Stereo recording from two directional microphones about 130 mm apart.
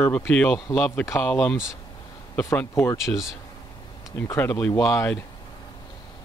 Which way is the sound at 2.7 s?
20° left (ahead or behind).